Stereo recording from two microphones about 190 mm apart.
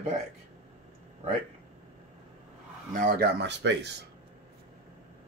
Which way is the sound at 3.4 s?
65° right (ahead or behind).